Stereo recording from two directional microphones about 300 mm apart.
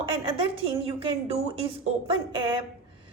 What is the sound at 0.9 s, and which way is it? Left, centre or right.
A woman's voice, centre.